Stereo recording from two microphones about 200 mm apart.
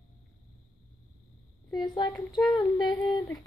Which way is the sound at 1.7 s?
20° left (ahead or behind).